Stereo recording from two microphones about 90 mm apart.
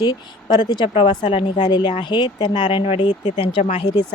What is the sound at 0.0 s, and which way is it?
Speech, 50° left (ahead or behind).